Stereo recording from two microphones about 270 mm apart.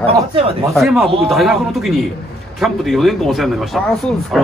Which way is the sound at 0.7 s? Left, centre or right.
Centre.